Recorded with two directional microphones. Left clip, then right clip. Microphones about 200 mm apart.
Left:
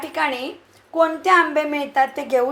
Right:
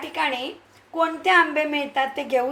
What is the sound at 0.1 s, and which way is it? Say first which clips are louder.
A woman's voice: left 2 dB; 20° left (ahead or behind).